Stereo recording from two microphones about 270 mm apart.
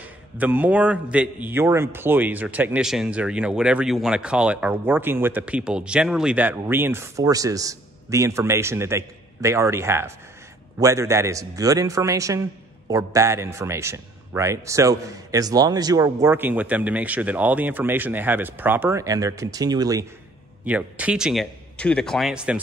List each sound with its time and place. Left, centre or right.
0.0 s a man's voice: centre